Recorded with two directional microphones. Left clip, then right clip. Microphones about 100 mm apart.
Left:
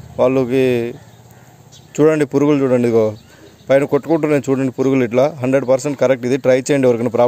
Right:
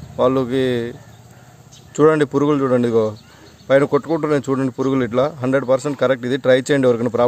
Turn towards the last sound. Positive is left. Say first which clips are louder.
# left 2 dB
turn(degrees=5)  # may be behind; listen again after turning